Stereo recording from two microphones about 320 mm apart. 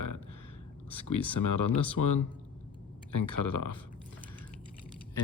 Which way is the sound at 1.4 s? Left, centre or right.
Left.